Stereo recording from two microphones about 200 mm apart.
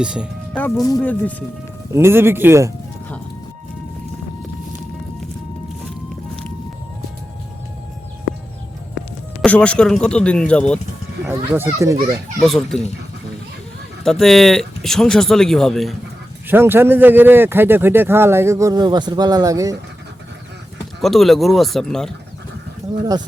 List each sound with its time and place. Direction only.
0.0 s speech: 5° right (ahead or behind)
0.5 s speech: 15° left (ahead or behind)
1.9 s a man's voice: 10° right (ahead or behind)
9.4 s speech: 5° left (ahead or behind)
11.3 s a man's voice: 10° right (ahead or behind)
12.4 s speech: centre (ahead or behind)
14.0 s speech: centre (ahead or behind)
16.5 s a man's voice: 10° right (ahead or behind)
21.0 s speech: centre (ahead or behind)